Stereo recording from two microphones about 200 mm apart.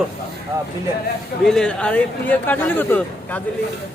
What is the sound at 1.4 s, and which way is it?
Speech, 5° left (ahead or behind).